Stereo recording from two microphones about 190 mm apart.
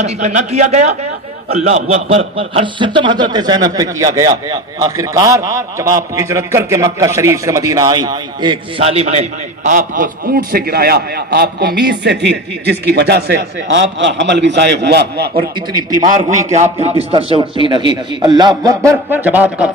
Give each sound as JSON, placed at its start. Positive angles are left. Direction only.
{"t": 0.0, "sound": "a man's voice", "side_deg": -35}
{"t": 16.7, "sound": "a man's voice", "side_deg": -30}
{"t": 18.9, "sound": "speech", "side_deg": -10}